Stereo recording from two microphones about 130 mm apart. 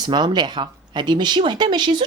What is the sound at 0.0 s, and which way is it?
A woman's voice, 35° right (ahead or behind).